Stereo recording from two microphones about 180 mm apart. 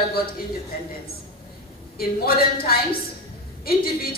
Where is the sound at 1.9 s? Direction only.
55° left (ahead or behind).